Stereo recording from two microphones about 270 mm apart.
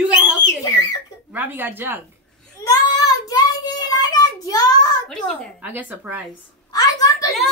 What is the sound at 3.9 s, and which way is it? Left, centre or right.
Child singing, centre.